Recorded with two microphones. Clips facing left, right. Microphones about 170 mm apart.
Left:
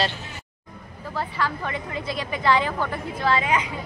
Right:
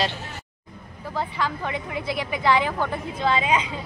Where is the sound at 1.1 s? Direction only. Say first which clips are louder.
Even; 15° right (ahead or behind).